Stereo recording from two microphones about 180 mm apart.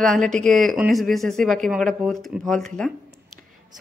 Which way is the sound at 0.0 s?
5° left (ahead or behind).